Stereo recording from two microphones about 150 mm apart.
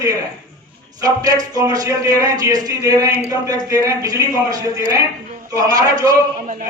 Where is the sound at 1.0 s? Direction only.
25° right (ahead or behind).